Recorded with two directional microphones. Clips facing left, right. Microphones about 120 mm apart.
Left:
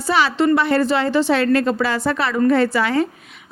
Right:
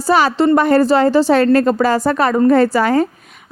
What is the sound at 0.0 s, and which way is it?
A woman's voice, 45° right (ahead or behind).